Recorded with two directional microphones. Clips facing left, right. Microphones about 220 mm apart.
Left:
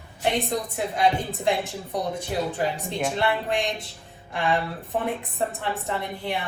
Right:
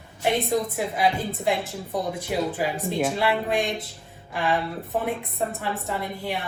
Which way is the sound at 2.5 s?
5° right (ahead or behind).